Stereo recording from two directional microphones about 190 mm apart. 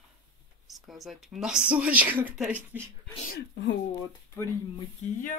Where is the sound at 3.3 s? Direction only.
65° left (ahead or behind).